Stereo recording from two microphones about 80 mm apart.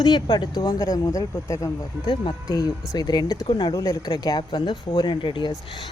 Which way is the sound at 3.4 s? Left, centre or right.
Left.